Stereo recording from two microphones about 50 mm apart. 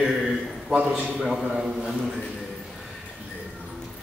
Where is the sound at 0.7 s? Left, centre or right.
Centre.